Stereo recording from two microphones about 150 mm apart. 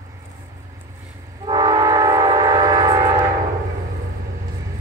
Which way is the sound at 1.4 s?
25° right (ahead or behind).